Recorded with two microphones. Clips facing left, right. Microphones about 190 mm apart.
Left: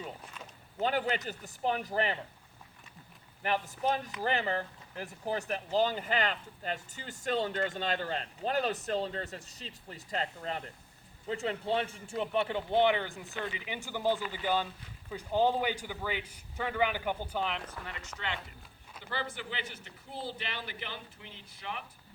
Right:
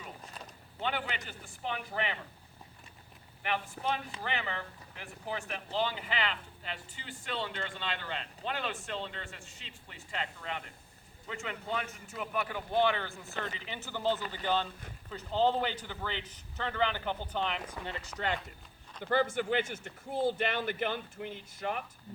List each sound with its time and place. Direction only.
0.8 s speech: 40° left (ahead or behind)
3.4 s a man's voice: 40° left (ahead or behind); by 17.6 s 5° left (ahead or behind)
17.6 s speech: 5° right (ahead or behind)
17.8 s speech: 30° right (ahead or behind)
19.0 s speech: 50° right (ahead or behind)